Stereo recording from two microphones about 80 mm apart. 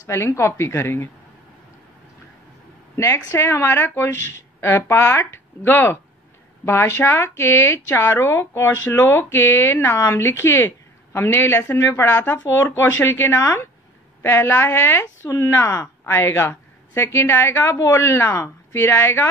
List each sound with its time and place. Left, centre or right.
0.0 s speech: left
3.0 s speech: left